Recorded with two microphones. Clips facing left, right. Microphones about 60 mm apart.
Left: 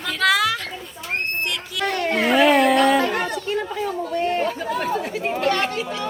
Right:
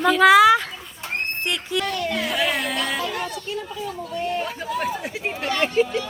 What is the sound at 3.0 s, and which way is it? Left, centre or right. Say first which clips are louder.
Chatter: left 5 dB; left.